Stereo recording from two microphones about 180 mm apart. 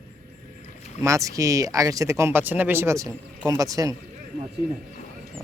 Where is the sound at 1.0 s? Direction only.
15° right (ahead or behind).